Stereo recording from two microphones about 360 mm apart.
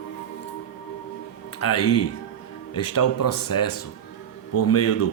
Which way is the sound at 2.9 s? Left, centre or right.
Left.